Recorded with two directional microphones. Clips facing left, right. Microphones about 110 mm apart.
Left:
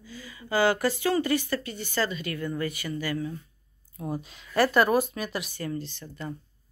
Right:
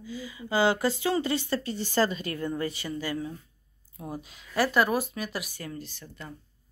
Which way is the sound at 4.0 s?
5° right (ahead or behind).